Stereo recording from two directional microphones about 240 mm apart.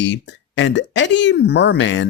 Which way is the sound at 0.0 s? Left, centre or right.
Left.